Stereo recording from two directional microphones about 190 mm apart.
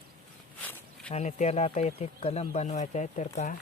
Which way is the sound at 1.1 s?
35° left (ahead or behind).